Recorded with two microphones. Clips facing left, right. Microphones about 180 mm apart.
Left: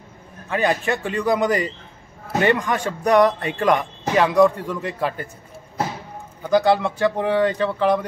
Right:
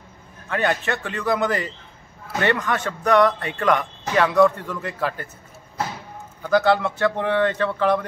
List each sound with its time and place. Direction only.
0.5 s a man's voice: 10° left (ahead or behind)
6.4 s a man's voice: 10° left (ahead or behind)